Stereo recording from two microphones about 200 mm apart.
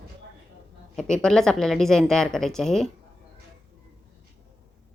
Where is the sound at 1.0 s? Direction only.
5° left (ahead or behind).